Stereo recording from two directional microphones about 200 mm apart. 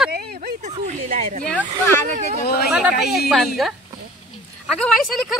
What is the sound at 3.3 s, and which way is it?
Speech, centre (ahead or behind).